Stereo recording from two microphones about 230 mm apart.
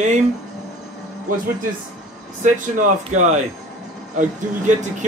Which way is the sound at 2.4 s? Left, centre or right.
Right.